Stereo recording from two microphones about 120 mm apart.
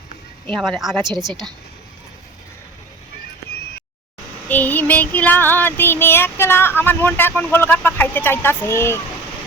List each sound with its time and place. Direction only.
0.6 s speech: centre (ahead or behind)
4.4 s child singing: 15° left (ahead or behind)